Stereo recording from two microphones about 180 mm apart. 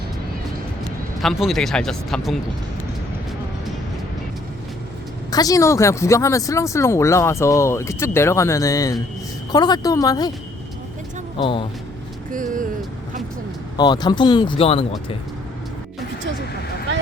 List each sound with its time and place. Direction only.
1.2 s speech: centre (ahead or behind)
5.3 s speech: 20° left (ahead or behind)
11.4 s speech: 30° left (ahead or behind)
12.3 s speech: 45° right (ahead or behind)
13.7 s speech: 25° left (ahead or behind)